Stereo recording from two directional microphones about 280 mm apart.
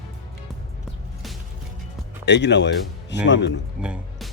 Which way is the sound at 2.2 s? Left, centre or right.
Left.